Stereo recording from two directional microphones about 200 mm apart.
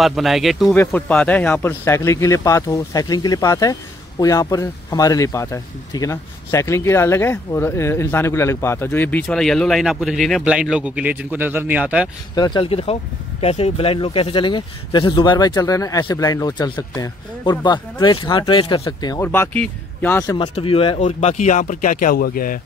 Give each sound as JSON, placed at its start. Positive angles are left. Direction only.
{"t": 0.0, "sound": "speech", "side_deg": 0}
{"t": 12.4, "sound": "speech", "side_deg": 20}
{"t": 20.3, "sound": "speech", "side_deg": 30}